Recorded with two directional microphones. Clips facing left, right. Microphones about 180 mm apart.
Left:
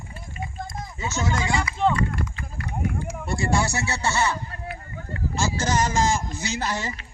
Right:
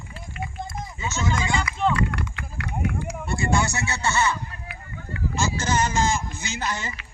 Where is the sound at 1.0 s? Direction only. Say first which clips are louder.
Left 1 dB; 35° left (ahead or behind).